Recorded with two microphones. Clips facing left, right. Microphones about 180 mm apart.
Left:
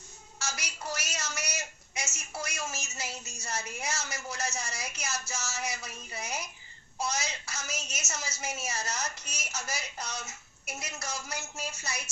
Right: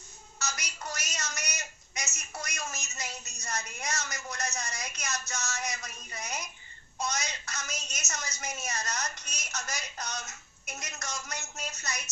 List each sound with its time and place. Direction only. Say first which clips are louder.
0.3 s a sound: even; 10° left (ahead or behind)
2.1 s a woman's voice: left 2 dB; 10° left (ahead or behind)
3.1 s a woman's voice: left 2 dB; 25° left (ahead or behind)
3.4 s a woman's voice: left 1 dB; 5° left (ahead or behind)
5.0 s a woman's voice: even; 30° left (ahead or behind)
5.3 s a woman's voice: even; 5° left (ahead or behind)
7.4 s a woman's voice: left 1 dB; 10° left (ahead or behind)